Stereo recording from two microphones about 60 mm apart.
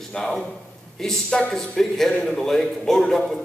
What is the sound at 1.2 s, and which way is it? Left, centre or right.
Speech, centre.